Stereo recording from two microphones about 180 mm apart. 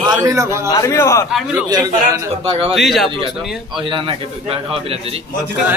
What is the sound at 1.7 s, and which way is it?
Speech, 20° right (ahead or behind).